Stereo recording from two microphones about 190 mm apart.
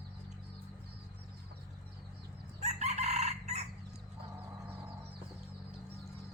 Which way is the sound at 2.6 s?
35° right (ahead or behind).